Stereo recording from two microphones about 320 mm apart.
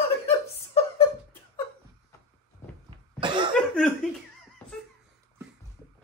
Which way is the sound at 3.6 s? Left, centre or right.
Centre.